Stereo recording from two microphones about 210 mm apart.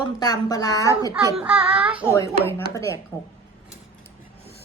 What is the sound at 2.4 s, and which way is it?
Speech, 10° left (ahead or behind).